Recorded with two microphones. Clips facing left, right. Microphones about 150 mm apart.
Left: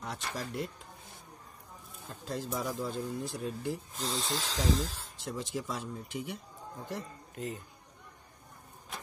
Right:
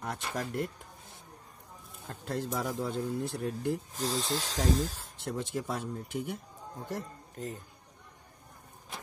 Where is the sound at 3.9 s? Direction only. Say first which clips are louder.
Right 3 dB; 40° right (ahead or behind).